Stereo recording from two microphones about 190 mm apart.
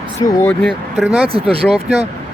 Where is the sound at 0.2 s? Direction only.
25° left (ahead or behind).